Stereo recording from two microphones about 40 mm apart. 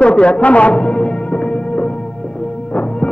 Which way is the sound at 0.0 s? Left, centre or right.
Left.